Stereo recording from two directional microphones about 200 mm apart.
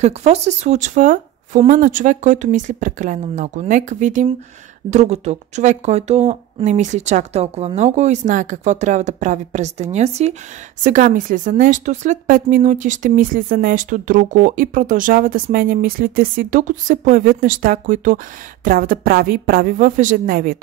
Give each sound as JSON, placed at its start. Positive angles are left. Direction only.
{"t": 0.0, "sound": "a woman's voice", "side_deg": -35}